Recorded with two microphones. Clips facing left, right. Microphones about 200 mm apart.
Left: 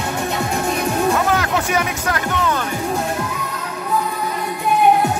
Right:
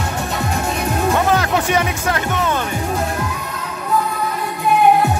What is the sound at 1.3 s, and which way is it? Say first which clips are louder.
Music: right 2 dB; 25° right (ahead or behind).